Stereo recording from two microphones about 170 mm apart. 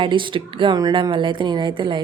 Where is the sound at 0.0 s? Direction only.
30° right (ahead or behind).